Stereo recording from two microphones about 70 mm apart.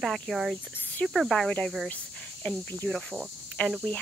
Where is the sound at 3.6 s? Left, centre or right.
Centre.